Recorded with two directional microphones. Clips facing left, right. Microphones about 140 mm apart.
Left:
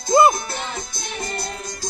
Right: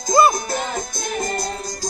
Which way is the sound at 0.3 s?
40° right (ahead or behind).